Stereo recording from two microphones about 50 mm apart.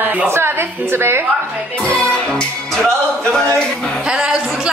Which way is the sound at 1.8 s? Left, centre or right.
Left.